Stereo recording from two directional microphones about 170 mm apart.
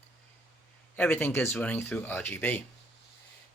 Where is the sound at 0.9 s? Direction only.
10° left (ahead or behind).